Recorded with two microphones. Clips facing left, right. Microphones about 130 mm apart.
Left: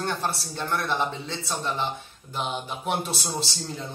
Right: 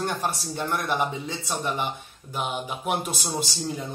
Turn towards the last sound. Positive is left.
turn(degrees=-10)  # may be behind; listen again after turning